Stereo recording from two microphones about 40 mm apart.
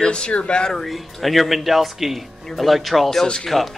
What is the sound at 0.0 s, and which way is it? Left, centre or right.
Speech, left.